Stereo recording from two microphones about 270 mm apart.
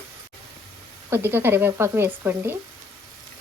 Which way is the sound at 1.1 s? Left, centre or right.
Centre.